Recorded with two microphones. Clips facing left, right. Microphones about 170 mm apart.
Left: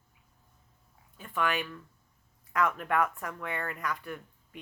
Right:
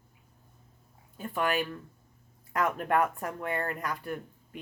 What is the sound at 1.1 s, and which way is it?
Speech, 40° right (ahead or behind).